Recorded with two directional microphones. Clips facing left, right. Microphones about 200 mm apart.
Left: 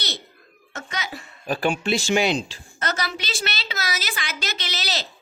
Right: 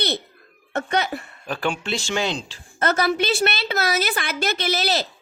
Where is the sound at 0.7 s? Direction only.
60° right (ahead or behind).